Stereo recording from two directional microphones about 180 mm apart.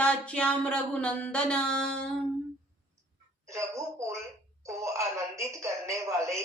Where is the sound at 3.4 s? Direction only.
15° right (ahead or behind).